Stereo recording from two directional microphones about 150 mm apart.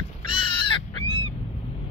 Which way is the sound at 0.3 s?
35° left (ahead or behind).